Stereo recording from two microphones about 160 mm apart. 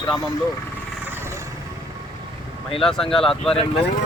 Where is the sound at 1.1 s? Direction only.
15° right (ahead or behind).